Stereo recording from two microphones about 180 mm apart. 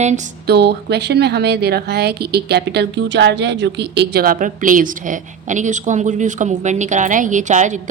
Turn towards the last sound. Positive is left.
turn(degrees=-40)  # may be behind; listen again after turning